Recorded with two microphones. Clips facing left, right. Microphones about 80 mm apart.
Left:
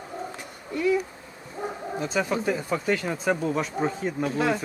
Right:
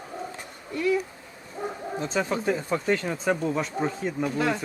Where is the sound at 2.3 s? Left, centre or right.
Centre.